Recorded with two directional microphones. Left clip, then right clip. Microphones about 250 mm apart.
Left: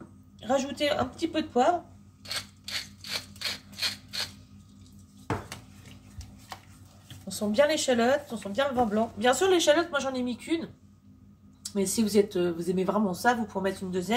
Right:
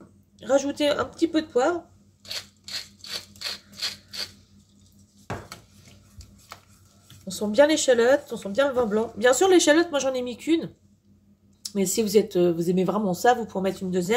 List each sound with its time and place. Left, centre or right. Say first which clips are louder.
0.4 s speech: right 5 dB; right
7.3 s speech: right 5 dB; right
11.7 s speech: right 4 dB; right